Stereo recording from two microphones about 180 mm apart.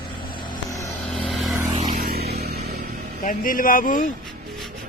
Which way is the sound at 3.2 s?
50° left (ahead or behind).